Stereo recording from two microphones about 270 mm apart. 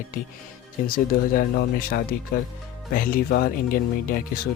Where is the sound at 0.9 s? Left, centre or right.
Left.